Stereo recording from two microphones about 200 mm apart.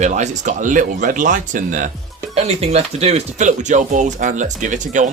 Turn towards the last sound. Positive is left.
turn(degrees=-40)  # may be behind; listen again after turning